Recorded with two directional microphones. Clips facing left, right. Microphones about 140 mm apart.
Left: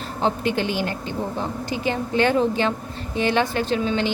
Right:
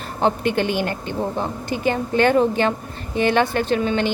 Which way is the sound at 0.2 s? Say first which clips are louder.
Right 3 dB; 55° right (ahead or behind).